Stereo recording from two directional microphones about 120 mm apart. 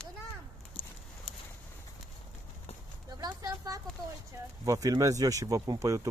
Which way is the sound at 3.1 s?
35° right (ahead or behind).